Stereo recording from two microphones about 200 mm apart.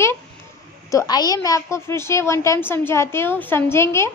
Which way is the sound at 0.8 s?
20° left (ahead or behind).